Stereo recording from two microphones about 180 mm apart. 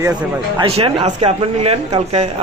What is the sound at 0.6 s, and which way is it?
Speech, 30° right (ahead or behind).